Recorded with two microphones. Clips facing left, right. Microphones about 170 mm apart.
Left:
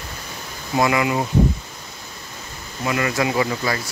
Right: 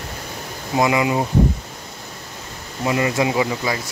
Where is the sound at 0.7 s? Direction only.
20° right (ahead or behind).